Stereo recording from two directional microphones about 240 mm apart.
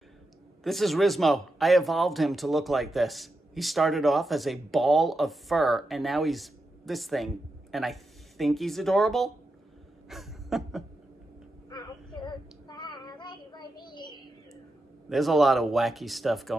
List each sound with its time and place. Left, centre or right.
0.7 s speech: centre
10.0 s a sound: centre
11.7 s child singing: centre
15.0 s speech: centre